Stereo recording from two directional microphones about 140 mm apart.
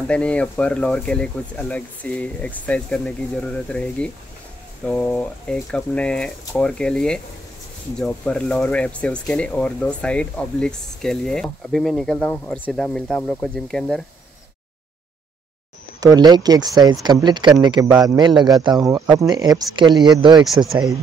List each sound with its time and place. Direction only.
0.1 s speech: 10° left (ahead or behind)
16.0 s speech: 25° right (ahead or behind)
20.4 s speech: centre (ahead or behind)